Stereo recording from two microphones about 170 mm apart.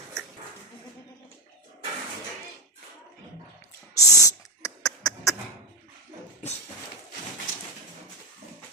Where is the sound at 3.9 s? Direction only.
20° left (ahead or behind).